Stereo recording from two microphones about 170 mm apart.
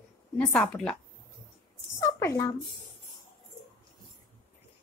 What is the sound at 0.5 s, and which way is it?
Speech, 5° left (ahead or behind).